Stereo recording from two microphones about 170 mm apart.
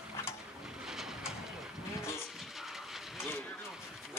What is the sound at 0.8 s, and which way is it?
Vehicle, 5° right (ahead or behind).